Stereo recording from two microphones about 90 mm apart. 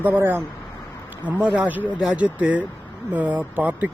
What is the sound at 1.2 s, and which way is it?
Speech, 10° right (ahead or behind).